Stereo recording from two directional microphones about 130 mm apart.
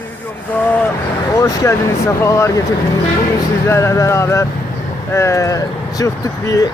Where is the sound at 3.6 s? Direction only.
20° left (ahead or behind).